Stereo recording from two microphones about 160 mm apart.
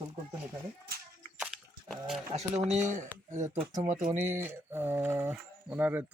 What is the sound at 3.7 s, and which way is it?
Speech, 15° right (ahead or behind).